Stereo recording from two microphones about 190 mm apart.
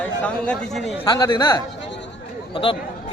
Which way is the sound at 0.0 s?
5° left (ahead or behind).